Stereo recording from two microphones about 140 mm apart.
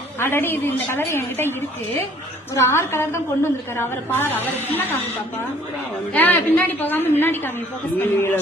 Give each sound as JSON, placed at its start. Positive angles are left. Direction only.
{"t": 0.2, "sound": "a woman's voice", "side_deg": 15}
{"t": 2.6, "sound": "a woman's voice", "side_deg": 20}
{"t": 6.1, "sound": "a woman's voice", "side_deg": 10}